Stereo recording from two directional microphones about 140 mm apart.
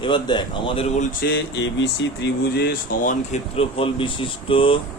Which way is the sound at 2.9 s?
70° left (ahead or behind).